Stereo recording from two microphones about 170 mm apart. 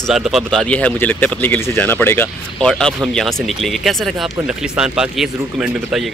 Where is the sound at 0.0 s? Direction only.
Centre (ahead or behind).